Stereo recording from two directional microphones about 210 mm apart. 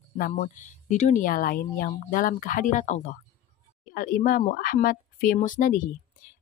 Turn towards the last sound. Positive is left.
turn(degrees=40)  # may be behind; listen again after turning